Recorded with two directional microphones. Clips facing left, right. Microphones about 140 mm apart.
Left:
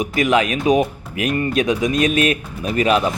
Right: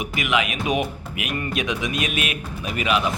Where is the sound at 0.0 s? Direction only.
40° left (ahead or behind).